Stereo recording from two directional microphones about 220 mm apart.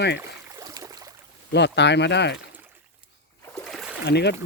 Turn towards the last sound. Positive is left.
turn(degrees=50)  # may be behind; listen again after turning